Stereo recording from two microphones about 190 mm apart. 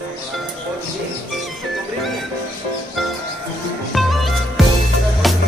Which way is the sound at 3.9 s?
Centre (ahead or behind).